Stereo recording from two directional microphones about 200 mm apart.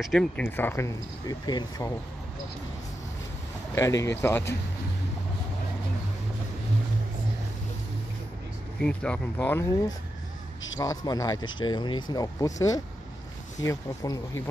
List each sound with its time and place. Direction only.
0.0 s speech: centre (ahead or behind); by 2.0 s 20° left (ahead or behind)
3.7 s speech: 15° left (ahead or behind)
8.8 s speech: 5° left (ahead or behind)